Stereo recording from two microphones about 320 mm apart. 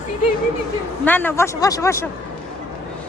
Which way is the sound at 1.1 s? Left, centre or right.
Centre.